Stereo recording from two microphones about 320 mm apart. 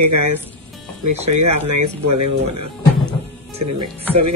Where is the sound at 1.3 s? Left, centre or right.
Right.